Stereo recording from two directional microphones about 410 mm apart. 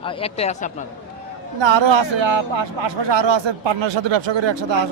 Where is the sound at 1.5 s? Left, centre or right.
Right.